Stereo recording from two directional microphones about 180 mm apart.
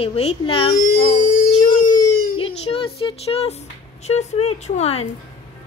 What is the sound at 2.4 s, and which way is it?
A woman's voice, 30° left (ahead or behind).